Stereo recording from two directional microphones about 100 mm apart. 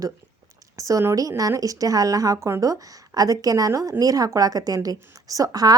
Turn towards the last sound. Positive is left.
turn(degrees=-40)  # may be behind; listen again after turning